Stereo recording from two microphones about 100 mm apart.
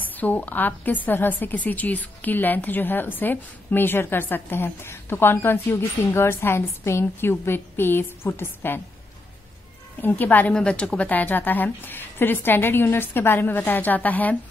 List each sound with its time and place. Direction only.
0.0 s a woman's voice: 15° left (ahead or behind)
10.0 s a woman's voice: 20° left (ahead or behind)